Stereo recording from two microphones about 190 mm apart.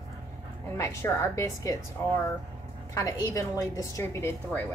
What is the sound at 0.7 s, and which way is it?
A woman's voice, 15° left (ahead or behind).